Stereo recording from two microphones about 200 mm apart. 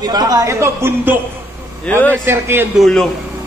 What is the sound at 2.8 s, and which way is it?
Speech, centre (ahead or behind).